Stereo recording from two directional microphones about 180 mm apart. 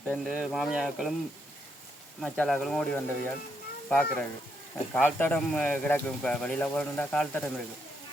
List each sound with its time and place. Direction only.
0.0 s speech: centre (ahead or behind)
2.2 s speech: 5° left (ahead or behind)